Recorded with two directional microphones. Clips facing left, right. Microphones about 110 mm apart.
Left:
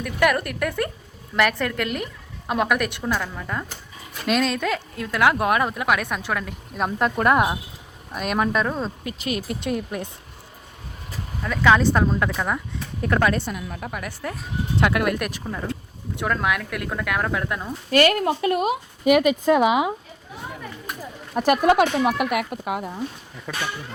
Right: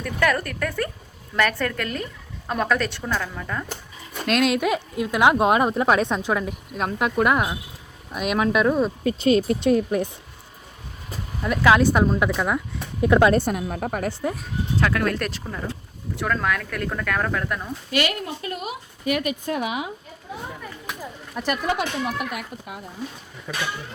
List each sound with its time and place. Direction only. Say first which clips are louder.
0.0 s speech: left 2 dB; 15° left (ahead or behind)
4.3 s speech: right 2 dB; 5° right (ahead or behind); by 6.6 s 20° right (ahead or behind)
6.7 s speech: even; centre (ahead or behind)
9.0 s speech: right 9 dB; 30° right (ahead or behind)
11.4 s a woman's voice: right 1 dB; 10° right (ahead or behind)
13.0 s a woman's voice: right 4 dB; 15° right (ahead or behind)
13.3 s a woman's voice: right 6 dB; 45° right (ahead or behind)
14.1 s speech: right 5 dB; 25° right (ahead or behind)
14.8 s speech: left 2 dB; 20° left (ahead or behind)
17.9 s speech: left 7 dB; 45° left (ahead or behind)
18.2 s speech: left 9 dB; 70° left (ahead or behind); by 19.9 s 90° left
21.3 s speech: left 8 dB; 50° left (ahead or behind); by 22.9 s 80° left